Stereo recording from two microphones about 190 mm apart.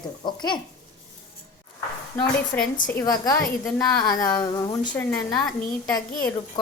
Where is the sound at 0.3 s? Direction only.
25° left (ahead or behind).